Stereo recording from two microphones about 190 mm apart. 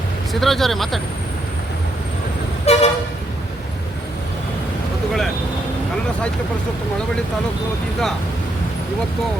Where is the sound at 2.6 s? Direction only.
35° left (ahead or behind).